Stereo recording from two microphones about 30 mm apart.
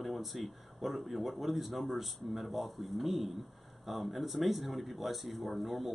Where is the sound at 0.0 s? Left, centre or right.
Centre.